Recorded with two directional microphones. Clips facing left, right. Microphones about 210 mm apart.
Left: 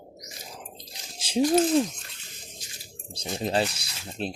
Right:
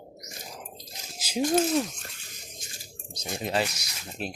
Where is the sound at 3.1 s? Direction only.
30° left (ahead or behind).